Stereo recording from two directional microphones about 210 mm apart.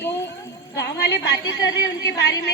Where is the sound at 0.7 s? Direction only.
55° left (ahead or behind).